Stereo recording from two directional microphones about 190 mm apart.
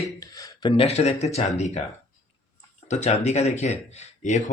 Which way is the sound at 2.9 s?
35° left (ahead or behind).